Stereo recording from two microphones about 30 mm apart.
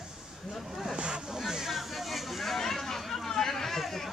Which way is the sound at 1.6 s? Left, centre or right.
Centre.